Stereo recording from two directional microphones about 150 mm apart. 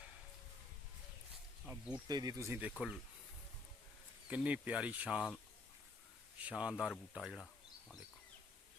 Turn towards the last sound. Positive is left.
turn(degrees=-5)  # may be behind; listen again after turning